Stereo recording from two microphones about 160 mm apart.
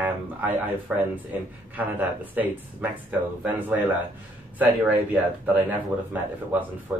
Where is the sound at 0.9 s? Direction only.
5° right (ahead or behind).